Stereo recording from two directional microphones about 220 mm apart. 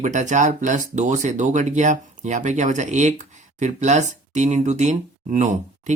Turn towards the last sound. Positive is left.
turn(degrees=-35)  # may be behind; listen again after turning